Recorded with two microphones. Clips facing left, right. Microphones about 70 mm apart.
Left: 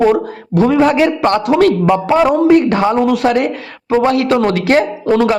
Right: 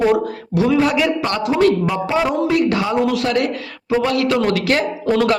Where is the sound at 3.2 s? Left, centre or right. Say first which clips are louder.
Left 5 dB; left.